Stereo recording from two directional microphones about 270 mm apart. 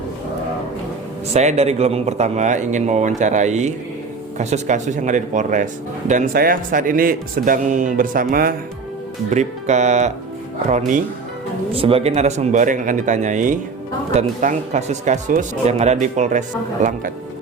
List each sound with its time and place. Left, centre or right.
1.3 s a man's voice: right